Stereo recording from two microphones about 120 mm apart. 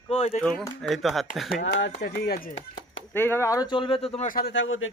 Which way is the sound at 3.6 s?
45° left (ahead or behind).